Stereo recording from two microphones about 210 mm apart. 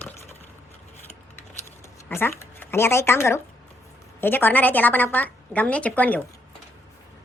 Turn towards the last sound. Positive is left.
turn(degrees=5)  # may be behind; listen again after turning